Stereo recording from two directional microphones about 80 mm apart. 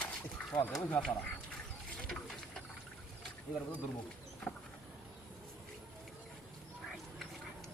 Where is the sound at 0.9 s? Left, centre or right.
Centre.